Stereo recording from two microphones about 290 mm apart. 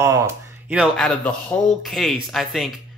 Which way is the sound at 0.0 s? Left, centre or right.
Centre.